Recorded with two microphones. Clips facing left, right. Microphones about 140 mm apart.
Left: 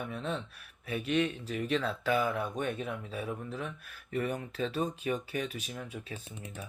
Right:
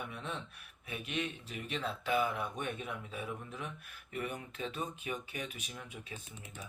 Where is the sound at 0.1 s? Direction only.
30° left (ahead or behind).